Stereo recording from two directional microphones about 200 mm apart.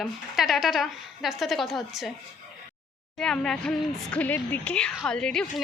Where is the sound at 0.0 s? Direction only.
Centre (ahead or behind).